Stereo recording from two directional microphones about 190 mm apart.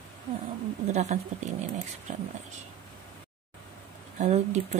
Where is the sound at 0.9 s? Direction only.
40° right (ahead or behind).